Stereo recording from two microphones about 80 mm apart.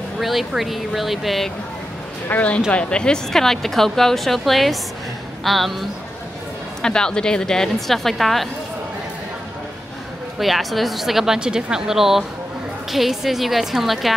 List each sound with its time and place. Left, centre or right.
0.2 s speech: centre
2.2 s speech: centre
10.4 s speech: centre